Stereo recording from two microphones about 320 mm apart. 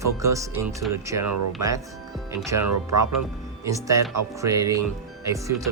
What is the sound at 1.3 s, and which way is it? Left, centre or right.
Speech, right.